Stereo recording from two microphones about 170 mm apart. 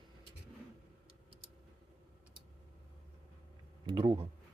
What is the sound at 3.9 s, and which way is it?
Speech, 30° right (ahead or behind).